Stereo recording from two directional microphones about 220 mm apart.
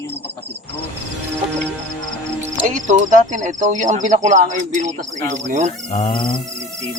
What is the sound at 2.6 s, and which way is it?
Speech, 35° right (ahead or behind).